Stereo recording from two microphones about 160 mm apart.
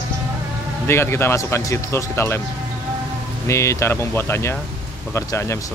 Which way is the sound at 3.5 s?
20° left (ahead or behind).